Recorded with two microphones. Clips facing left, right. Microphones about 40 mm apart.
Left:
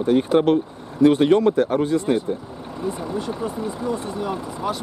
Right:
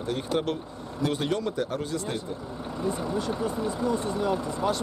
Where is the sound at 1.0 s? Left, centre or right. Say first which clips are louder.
Left 13 dB; left.